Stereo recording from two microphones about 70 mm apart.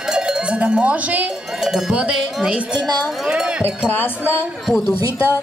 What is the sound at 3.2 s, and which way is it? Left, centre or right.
Cowbell, centre.